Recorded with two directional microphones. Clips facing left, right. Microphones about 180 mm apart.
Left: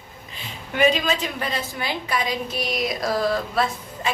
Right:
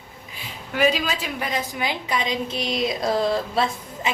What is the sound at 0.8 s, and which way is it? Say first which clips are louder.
A woman's voice: left 2 dB; 5° right (ahead or behind).